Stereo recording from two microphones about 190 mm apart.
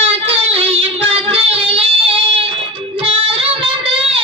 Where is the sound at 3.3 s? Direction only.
30° right (ahead or behind).